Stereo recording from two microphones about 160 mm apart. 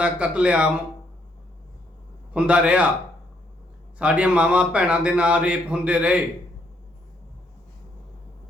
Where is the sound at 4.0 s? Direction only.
5° right (ahead or behind).